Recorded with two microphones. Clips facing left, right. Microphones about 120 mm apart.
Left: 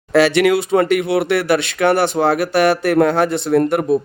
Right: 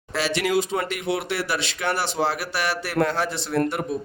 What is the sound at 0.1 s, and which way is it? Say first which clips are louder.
Speech: left 10 dB; 65° left (ahead or behind).